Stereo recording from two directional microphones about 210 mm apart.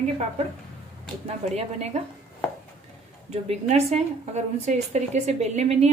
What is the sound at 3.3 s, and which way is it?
A woman's voice, 30° right (ahead or behind).